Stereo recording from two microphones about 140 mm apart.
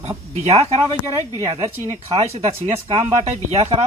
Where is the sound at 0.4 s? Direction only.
50° right (ahead or behind).